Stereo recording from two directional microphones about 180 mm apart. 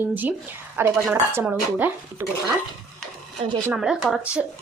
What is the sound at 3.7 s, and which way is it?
Speech, 5° right (ahead or behind).